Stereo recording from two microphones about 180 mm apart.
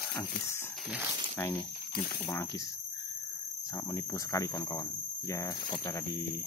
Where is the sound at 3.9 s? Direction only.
15° left (ahead or behind).